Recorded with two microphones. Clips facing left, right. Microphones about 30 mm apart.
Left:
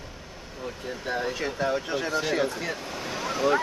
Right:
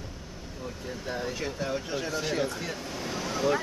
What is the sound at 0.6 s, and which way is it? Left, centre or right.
Speech, left.